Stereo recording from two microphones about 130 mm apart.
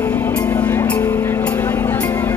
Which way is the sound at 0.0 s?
20° left (ahead or behind).